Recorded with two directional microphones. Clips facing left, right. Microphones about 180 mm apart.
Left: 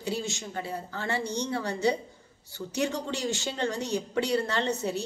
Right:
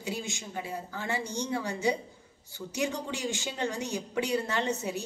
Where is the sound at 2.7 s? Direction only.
15° right (ahead or behind).